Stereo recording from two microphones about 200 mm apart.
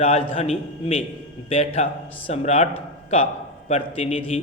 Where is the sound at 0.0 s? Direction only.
30° left (ahead or behind).